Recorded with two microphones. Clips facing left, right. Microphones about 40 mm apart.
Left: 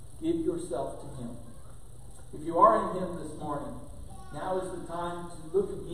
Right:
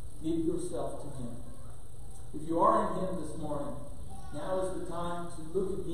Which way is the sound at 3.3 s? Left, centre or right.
Centre.